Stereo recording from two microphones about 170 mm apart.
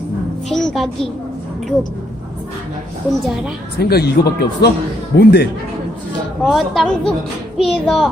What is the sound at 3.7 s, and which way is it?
Speech, 70° left (ahead or behind).